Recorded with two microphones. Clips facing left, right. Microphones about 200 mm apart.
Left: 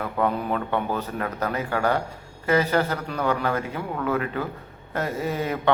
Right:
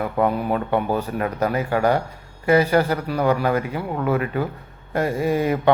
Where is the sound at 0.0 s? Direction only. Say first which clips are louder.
Right 4 dB; 10° right (ahead or behind).